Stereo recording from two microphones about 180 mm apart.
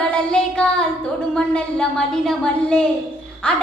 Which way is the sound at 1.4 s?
5° left (ahead or behind).